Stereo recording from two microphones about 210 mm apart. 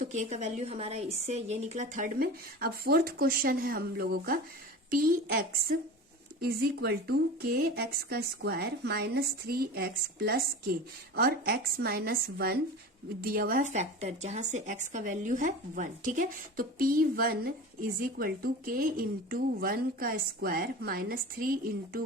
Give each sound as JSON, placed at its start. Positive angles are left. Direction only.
{"t": 0.0, "sound": "speech", "side_deg": -35}